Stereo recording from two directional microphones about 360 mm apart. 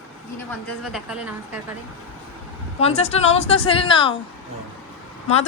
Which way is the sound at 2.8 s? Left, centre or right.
Centre.